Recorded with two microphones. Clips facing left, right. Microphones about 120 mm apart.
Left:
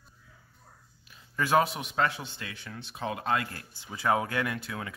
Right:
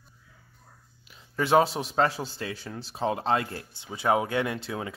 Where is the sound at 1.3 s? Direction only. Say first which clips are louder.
Right 3 dB; 25° right (ahead or behind).